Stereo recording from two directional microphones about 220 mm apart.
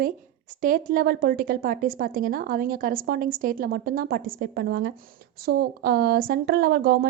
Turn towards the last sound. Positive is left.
turn(degrees=-45)  # may be behind; listen again after turning